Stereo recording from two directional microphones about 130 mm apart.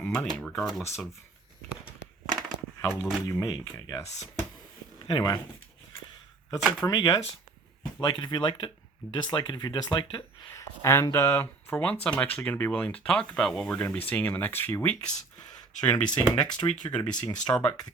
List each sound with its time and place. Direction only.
0.0 s a sound: 10° left (ahead or behind)
0.3 s speech: 5° left (ahead or behind)
2.8 s speech: 5° right (ahead or behind)
3.2 s speech: 25° left (ahead or behind)
5.0 s speech: 30° left (ahead or behind)
6.6 s speech: centre (ahead or behind)
6.8 s speech: 30° left (ahead or behind)
10.5 s speech: 20° left (ahead or behind)
16.8 s speech: 30° left (ahead or behind)
17.5 s speech: 10° left (ahead or behind)